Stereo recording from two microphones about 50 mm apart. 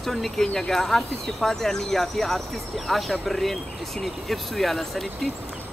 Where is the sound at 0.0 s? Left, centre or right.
Centre.